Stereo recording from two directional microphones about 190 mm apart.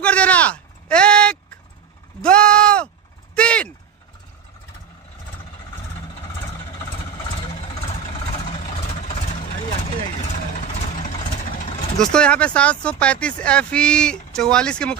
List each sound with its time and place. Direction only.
0.0 s a sound: 5° left (ahead or behind)
2.2 s bleat: 5° left (ahead or behind)
3.3 s a sound: 5° left (ahead or behind)
7.5 s vehicle: 30° left (ahead or behind)
10.5 s vehicle: 35° left (ahead or behind)
12.0 s speech: 5° left (ahead or behind)